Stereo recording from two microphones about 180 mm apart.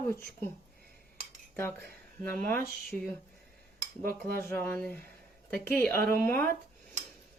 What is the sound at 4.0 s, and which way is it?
Speech, 55° right (ahead or behind).